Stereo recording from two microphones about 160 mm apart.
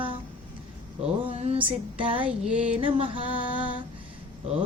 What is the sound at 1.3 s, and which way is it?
Music, 40° right (ahead or behind).